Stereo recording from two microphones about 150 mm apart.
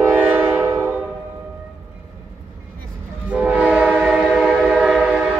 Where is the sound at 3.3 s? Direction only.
10° right (ahead or behind).